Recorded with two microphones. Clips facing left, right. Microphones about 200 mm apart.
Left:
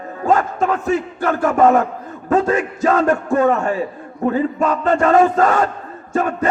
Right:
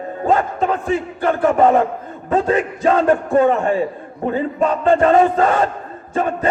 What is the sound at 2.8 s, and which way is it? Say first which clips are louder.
Speech: right 1 dB; 25° right (ahead or behind).